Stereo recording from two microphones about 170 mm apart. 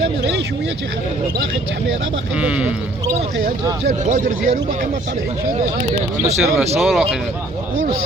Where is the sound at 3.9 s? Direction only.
45° right (ahead or behind).